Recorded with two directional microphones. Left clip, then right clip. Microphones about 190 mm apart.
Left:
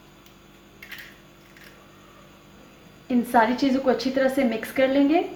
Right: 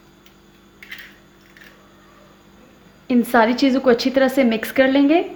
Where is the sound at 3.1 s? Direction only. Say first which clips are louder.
Right 4 dB; 55° right (ahead or behind).